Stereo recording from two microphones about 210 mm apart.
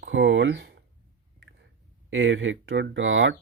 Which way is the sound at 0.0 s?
60° right (ahead or behind).